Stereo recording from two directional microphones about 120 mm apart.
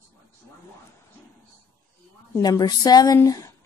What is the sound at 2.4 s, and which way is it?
Speech, 35° left (ahead or behind).